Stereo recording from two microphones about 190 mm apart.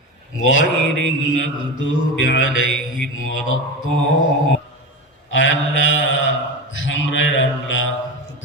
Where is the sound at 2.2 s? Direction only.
85° left.